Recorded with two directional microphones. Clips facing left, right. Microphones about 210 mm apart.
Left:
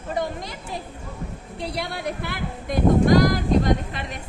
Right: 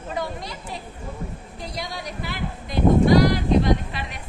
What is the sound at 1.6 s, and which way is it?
Speech, 65° left (ahead or behind).